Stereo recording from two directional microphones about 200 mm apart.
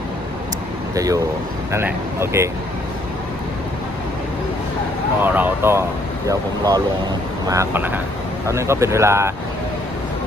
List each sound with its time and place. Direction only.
0.9 s speech: 15° right (ahead or behind)
5.2 s speech: 10° right (ahead or behind)